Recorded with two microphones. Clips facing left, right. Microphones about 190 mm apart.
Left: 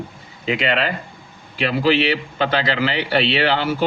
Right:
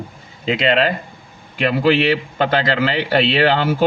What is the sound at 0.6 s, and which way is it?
A man's voice, 40° right (ahead or behind).